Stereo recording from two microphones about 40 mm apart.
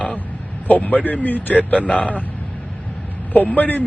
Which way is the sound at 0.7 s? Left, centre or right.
Left.